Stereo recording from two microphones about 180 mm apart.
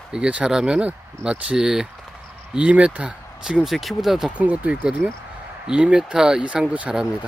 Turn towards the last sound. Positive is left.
turn(degrees=-5)  # may be behind; listen again after turning